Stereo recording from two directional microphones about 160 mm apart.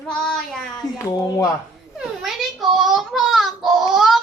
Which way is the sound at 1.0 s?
20° left (ahead or behind).